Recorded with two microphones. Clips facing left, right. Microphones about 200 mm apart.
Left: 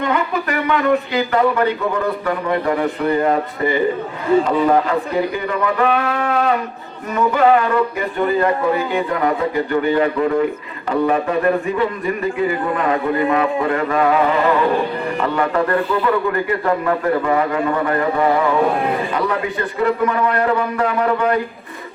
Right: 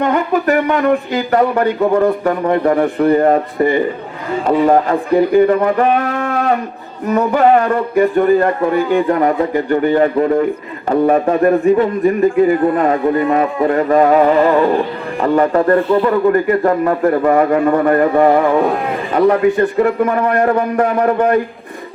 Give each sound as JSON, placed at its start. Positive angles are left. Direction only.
{"t": 0.1, "sound": "a man's voice", "side_deg": -45}